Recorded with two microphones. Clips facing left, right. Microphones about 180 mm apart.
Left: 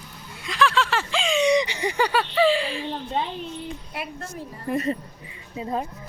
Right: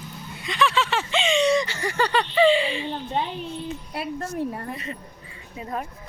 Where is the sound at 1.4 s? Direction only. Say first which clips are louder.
Left 1 dB; 15° left (ahead or behind); by 3.2 s centre (ahead or behind).